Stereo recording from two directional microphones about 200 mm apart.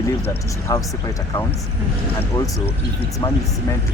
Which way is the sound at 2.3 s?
15° left (ahead or behind).